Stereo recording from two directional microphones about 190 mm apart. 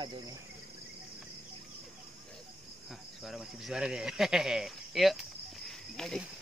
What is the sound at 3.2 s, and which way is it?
Speech, centre (ahead or behind).